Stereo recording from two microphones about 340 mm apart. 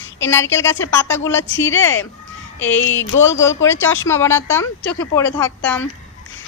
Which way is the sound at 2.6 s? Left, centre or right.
Centre.